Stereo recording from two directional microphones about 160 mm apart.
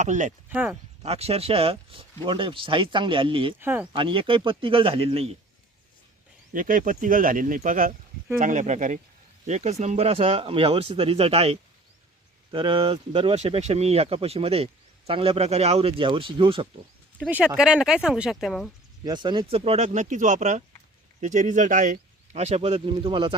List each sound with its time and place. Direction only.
0.0 s speech: 50° right (ahead or behind)
0.5 s speech: 10° right (ahead or behind)
1.0 s speech: 40° right (ahead or behind)
3.6 s speech: 10° right (ahead or behind)
3.9 s speech: 35° right (ahead or behind)
6.5 s speech: 60° right (ahead or behind); by 16.6 s 35° right (ahead or behind)
17.2 s speech: 10° right (ahead or behind)
19.0 s speech: 30° right (ahead or behind)